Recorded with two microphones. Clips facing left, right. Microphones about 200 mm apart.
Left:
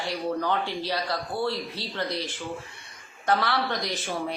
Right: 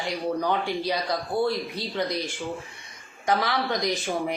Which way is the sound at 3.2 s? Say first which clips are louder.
Even; 10° right (ahead or behind).